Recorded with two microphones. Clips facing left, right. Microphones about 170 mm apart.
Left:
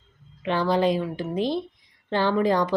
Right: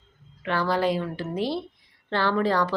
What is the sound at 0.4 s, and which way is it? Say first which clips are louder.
A woman's voice: left 2 dB; 20° left (ahead or behind).